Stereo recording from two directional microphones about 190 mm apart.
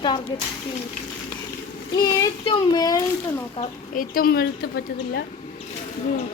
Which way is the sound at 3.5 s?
45° left (ahead or behind).